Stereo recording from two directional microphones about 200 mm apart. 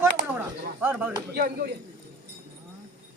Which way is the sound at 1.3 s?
50° right (ahead or behind).